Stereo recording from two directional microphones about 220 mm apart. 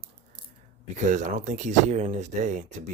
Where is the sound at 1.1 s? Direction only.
35° right (ahead or behind).